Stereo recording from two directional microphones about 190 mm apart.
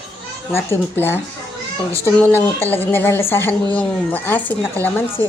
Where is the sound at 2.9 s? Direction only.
10° left (ahead or behind).